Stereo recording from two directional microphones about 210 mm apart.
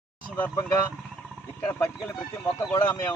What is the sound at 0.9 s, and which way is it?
Vehicle, centre (ahead or behind).